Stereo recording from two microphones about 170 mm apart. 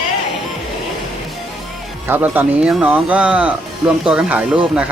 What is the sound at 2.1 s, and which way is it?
Speech, 10° right (ahead or behind).